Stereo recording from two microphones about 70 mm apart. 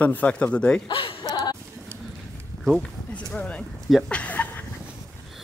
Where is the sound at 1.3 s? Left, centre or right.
Left.